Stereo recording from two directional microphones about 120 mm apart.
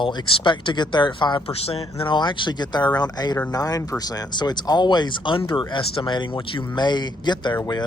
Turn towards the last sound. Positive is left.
turn(degrees=35)  # may be behind; listen again after turning